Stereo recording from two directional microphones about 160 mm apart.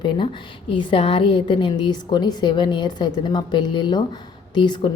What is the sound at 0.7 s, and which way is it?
A woman's voice, 30° left (ahead or behind).